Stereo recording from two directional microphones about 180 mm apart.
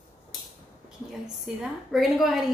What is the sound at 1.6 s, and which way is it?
Speech, centre (ahead or behind).